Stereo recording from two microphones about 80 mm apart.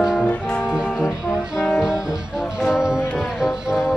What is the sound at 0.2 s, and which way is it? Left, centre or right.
Music, centre.